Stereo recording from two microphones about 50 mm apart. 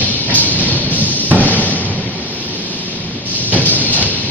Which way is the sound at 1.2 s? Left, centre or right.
Right.